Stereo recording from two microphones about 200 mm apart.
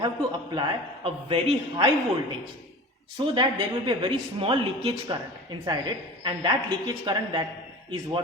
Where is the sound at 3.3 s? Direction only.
25° right (ahead or behind).